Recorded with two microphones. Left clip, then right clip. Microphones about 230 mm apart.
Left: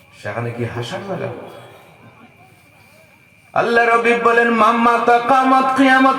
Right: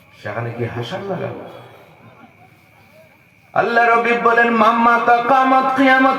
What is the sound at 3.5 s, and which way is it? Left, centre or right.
A man's voice, left.